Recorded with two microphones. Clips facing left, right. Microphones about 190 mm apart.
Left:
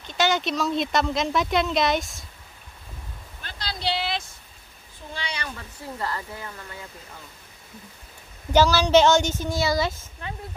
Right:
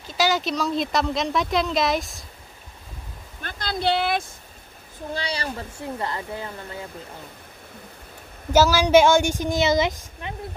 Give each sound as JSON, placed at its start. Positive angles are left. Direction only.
{"t": 0.0, "sound": "speech", "side_deg": 0}
{"t": 3.4, "sound": "speech", "side_deg": -50}
{"t": 5.1, "sound": "speech", "side_deg": -35}
{"t": 8.5, "sound": "a woman's voice", "side_deg": -10}